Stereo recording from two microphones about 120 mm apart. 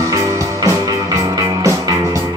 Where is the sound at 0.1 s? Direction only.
30° right (ahead or behind).